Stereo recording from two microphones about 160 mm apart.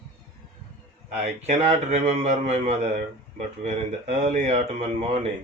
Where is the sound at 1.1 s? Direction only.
45° right (ahead or behind).